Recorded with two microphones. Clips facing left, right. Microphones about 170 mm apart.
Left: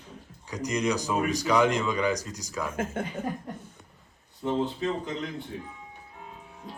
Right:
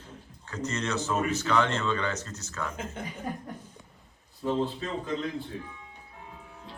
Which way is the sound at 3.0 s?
55° left (ahead or behind).